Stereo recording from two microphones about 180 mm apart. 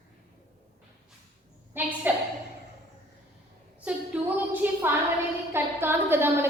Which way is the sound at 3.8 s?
10° right (ahead or behind).